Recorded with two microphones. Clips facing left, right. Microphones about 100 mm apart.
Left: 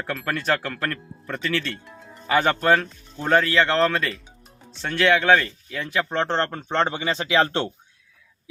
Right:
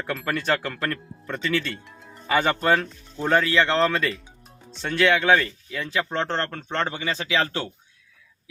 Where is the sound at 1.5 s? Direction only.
10° right (ahead or behind).